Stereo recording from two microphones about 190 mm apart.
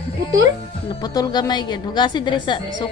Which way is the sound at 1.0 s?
20° left (ahead or behind).